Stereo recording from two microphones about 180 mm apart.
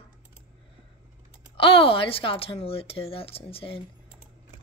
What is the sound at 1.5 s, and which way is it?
A woman's voice, 30° left (ahead or behind).